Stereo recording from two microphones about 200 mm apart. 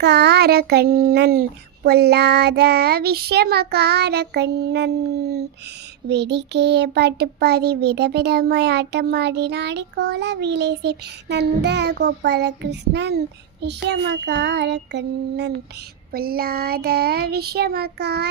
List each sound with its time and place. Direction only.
0.0 s child singing: 55° right (ahead or behind)
6.1 s child singing: 60° right (ahead or behind)
16.1 s child singing: 50° right (ahead or behind)